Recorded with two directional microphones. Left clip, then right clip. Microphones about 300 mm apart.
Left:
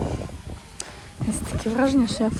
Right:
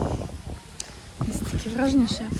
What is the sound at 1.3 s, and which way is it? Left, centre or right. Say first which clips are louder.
Speech: left 5 dB; centre.